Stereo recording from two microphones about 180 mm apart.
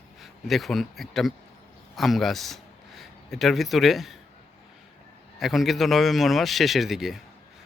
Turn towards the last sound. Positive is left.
turn(degrees=0)  # may be behind; listen again after turning